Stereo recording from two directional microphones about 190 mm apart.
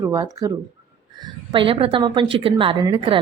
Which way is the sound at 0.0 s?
20° right (ahead or behind).